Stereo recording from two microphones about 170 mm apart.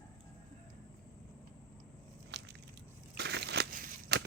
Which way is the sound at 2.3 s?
90° right.